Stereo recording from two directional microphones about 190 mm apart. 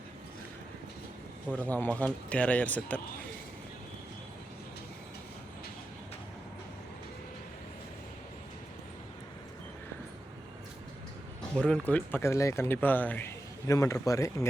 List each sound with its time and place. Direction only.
1.5 s speech: 10° left (ahead or behind)
11.5 s speech: 5° left (ahead or behind)